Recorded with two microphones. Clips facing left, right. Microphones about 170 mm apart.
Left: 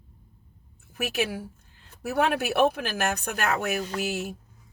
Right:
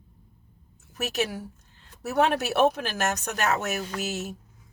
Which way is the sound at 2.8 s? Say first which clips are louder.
Even; 40° right (ahead or behind).